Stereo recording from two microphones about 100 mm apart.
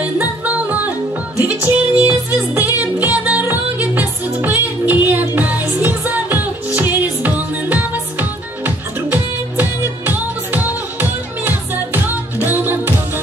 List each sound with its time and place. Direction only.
0.0 s music: 15° right (ahead or behind)